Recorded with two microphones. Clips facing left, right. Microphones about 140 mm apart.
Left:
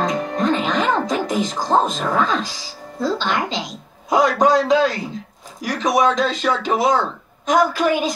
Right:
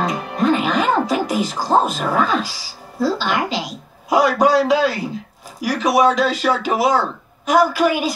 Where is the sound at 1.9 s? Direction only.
5° right (ahead or behind).